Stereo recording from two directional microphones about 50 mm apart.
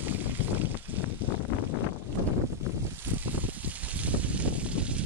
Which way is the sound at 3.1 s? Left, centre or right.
Right.